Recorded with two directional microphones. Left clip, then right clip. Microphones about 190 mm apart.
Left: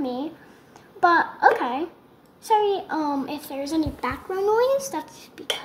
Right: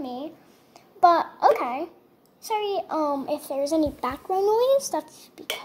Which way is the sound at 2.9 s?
35° right (ahead or behind).